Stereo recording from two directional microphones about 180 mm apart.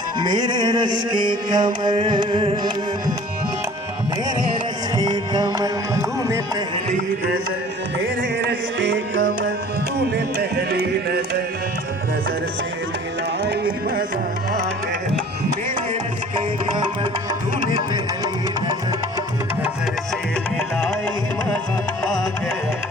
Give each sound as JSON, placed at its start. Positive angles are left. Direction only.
{"t": 0.2, "sound": "music", "side_deg": -25}
{"t": 4.9, "sound": "music", "side_deg": -20}
{"t": 8.4, "sound": "music", "side_deg": -70}
{"t": 10.3, "sound": "music", "side_deg": -60}
{"t": 16.7, "sound": "music", "side_deg": -25}